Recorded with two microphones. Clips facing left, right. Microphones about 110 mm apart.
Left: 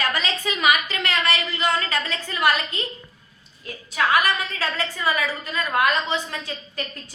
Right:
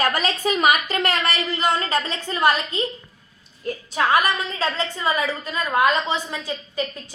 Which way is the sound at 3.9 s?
25° right (ahead or behind).